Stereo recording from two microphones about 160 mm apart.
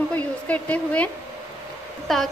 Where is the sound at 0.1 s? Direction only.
10° left (ahead or behind).